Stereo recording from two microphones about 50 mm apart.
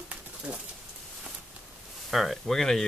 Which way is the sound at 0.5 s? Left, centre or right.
Right.